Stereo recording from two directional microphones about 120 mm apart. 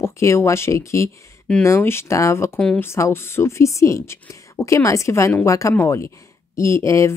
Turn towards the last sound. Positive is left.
turn(degrees=25)  # may be behind; listen again after turning